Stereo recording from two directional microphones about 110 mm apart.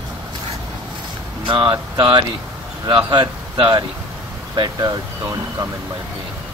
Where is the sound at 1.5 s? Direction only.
45° right (ahead or behind).